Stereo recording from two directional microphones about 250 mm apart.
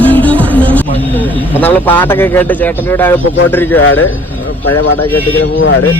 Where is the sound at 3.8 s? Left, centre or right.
Left.